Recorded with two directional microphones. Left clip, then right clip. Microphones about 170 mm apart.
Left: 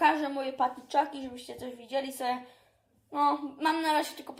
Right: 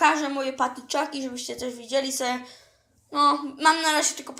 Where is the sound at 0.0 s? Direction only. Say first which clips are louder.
Right 5 dB; 45° right (ahead or behind).